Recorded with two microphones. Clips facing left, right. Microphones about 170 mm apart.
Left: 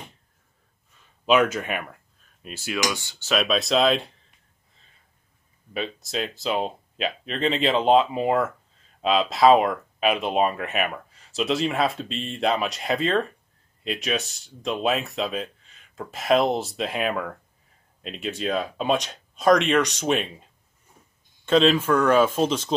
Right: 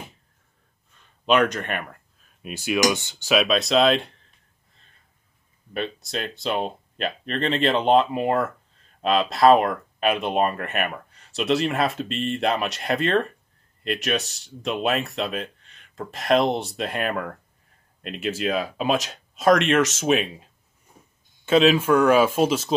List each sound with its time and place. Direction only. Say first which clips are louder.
0.9 s speech: even; 5° left (ahead or behind)
2.4 s speech: right 6 dB; 15° right (ahead or behind)
3.3 s speech: right 2 dB; centre (ahead or behind)
5.7 s speech: right 1 dB; centre (ahead or behind)
21.5 s speech: right 1 dB; 5° right (ahead or behind)